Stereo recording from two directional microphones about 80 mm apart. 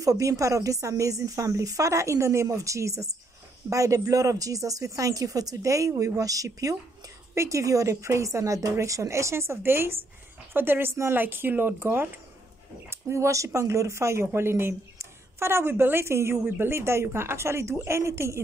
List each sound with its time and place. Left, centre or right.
0.0 s speech: right
12.9 s speech: right